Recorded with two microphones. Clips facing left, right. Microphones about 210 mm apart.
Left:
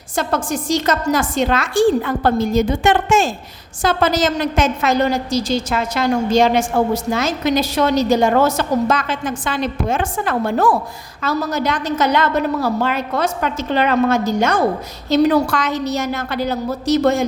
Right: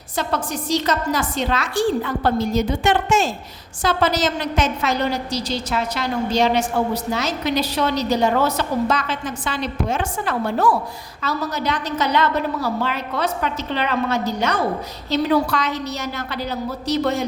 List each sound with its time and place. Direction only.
0.5 s a woman's voice: 50° left (ahead or behind)
15.2 s a woman's voice: 70° left (ahead or behind)
15.4 s a woman's voice: 50° left (ahead or behind)